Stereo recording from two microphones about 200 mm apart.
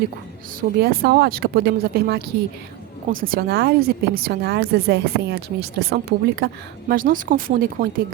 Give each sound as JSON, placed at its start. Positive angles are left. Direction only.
{"t": 0.8, "sound": "speech", "side_deg": -50}